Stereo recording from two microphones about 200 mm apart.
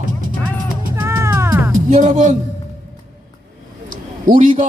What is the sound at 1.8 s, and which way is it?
Speech, 40° right (ahead or behind).